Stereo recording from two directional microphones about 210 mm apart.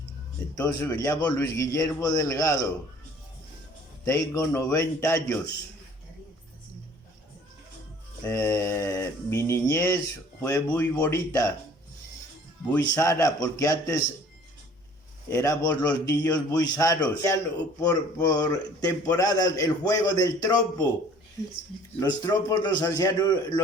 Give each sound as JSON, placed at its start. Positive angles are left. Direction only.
{"t": 0.5, "sound": "a man's voice", "side_deg": 15}
{"t": 4.0, "sound": "a man's voice", "side_deg": 15}
{"t": 8.2, "sound": "a man's voice", "side_deg": 15}
{"t": 12.8, "sound": "a man's voice", "side_deg": 15}
{"t": 15.3, "sound": "a man's voice", "side_deg": 15}
{"t": 22.0, "sound": "a man's voice", "side_deg": 15}